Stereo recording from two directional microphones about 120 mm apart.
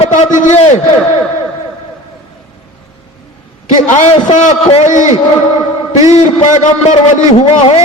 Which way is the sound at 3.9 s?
70° left (ahead or behind).